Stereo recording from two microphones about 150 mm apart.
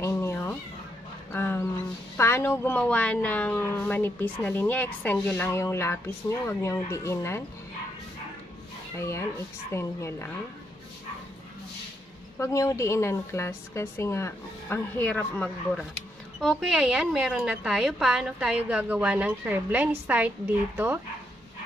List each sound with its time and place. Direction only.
0.0 s cat: 20° left (ahead or behind)
1.3 s a sound: 15° left (ahead or behind)
2.1 s speech: 15° left (ahead or behind)
8.9 s speech: 20° left (ahead or behind)
12.4 s speech: 20° left (ahead or behind); by 21.0 s 15° right (ahead or behind)